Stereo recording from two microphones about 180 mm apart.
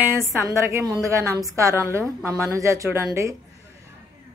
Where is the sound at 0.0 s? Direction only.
15° right (ahead or behind).